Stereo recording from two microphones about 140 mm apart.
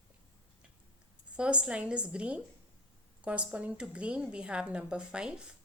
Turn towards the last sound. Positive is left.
turn(degrees=-5)  # may be behind; listen again after turning